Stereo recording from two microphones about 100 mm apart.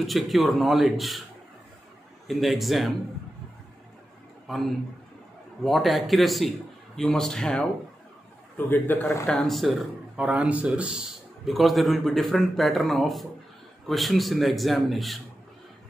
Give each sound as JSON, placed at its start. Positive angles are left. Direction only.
{"t": 0.0, "sound": "a man's voice", "side_deg": 0}
{"t": 2.2, "sound": "a man's voice", "side_deg": 0}
{"t": 4.5, "sound": "a man's voice", "side_deg": 0}
{"t": 8.5, "sound": "a man's voice", "side_deg": 20}
{"t": 9.3, "sound": "a man's voice", "side_deg": 0}
{"t": 10.1, "sound": "a man's voice", "side_deg": -10}